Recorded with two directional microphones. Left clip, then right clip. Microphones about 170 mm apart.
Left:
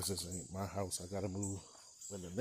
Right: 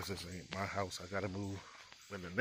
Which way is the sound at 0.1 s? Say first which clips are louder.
Even; 45° left (ahead or behind).